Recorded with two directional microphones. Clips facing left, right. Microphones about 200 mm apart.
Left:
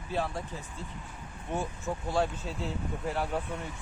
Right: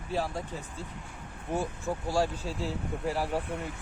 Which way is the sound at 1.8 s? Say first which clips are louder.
Right 1 dB; 10° right (ahead or behind).